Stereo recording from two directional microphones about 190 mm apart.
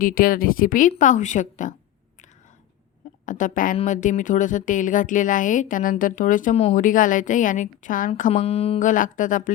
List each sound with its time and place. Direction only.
0.0 s a woman's voice: 50° left (ahead or behind)
3.2 s a woman's voice: 45° left (ahead or behind)